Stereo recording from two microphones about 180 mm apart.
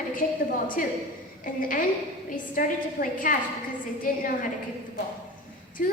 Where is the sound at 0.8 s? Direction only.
50° left (ahead or behind).